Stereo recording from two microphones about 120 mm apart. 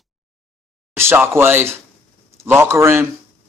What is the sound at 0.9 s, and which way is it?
A man's voice, 20° right (ahead or behind).